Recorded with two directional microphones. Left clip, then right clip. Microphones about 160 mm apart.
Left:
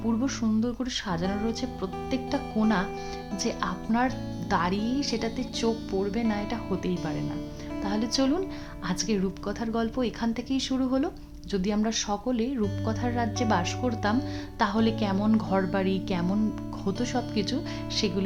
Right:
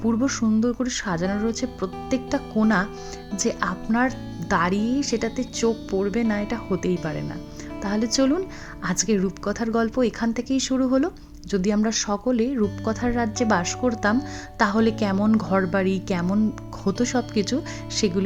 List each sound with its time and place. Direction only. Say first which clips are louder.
0.2 s speech: right 6 dB; 30° right (ahead or behind)